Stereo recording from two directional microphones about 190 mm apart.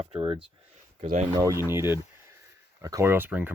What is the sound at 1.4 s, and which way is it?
Speech, 15° right (ahead or behind).